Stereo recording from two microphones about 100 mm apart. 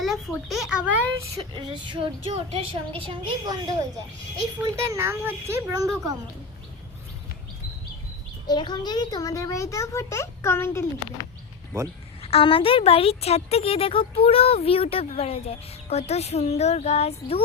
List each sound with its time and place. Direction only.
0.0 s a child's voice: centre (ahead or behind)
1.5 s speech: 50° right (ahead or behind)
2.3 s a woman's voice: 75° right (ahead or behind)
3.0 s a woman's voice: 60° right (ahead or behind)
3.4 s a woman's voice: 35° right (ahead or behind)
8.4 s a child's voice: 45° left (ahead or behind); by 10.8 s 25° left (ahead or behind)
12.2 s speech: 70° left (ahead or behind)